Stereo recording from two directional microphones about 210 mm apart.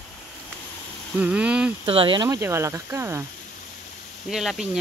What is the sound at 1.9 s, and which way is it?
Speech, 25° right (ahead or behind).